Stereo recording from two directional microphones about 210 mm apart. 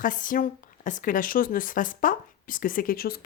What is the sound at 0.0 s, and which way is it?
Speech, 40° left (ahead or behind).